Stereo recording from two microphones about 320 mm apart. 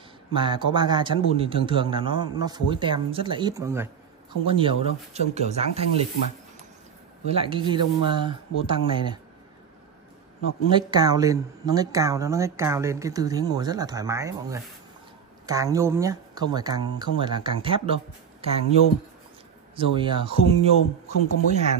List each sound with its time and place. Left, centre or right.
0.3 s speech: centre
7.2 s speech: centre
10.7 s speech: centre
19.7 s speech: centre